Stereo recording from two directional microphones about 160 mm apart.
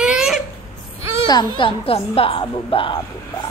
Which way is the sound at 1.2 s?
30° left (ahead or behind).